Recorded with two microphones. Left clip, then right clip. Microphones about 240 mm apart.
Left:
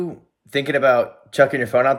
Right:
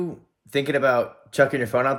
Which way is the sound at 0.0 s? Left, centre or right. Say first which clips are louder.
Left 2 dB; centre.